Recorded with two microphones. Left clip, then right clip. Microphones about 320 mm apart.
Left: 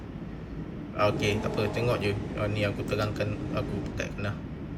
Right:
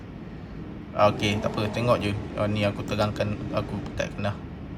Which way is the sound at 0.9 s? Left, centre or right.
Centre.